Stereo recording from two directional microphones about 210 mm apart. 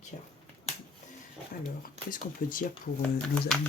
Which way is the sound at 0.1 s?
35° left (ahead or behind).